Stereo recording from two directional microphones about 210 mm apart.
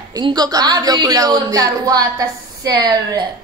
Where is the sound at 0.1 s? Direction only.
20° right (ahead or behind).